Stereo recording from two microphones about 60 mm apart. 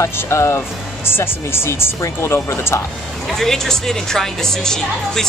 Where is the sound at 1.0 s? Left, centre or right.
Left.